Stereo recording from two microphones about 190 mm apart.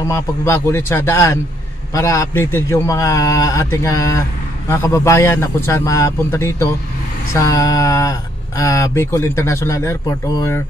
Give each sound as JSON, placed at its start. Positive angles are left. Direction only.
{"t": 0.1, "sound": "speech", "side_deg": 15}